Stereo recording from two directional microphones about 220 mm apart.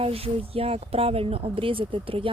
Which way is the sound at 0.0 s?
25° right (ahead or behind).